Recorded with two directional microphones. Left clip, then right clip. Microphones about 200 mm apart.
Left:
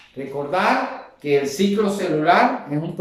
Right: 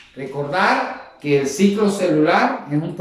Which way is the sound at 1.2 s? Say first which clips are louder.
Right 2 dB; centre (ahead or behind).